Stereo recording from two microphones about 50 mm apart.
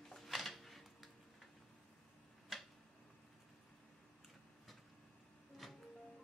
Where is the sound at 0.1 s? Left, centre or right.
Centre.